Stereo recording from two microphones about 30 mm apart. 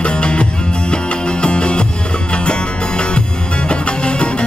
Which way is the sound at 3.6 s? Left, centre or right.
Left.